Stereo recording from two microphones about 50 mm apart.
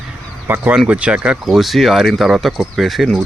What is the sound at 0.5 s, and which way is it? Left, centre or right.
Speech, right.